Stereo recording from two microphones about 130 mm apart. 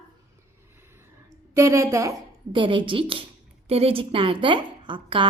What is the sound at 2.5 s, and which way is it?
A woman's voice, 40° right (ahead or behind).